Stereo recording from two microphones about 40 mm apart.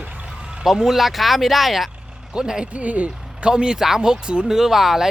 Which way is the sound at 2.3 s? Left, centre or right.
Centre.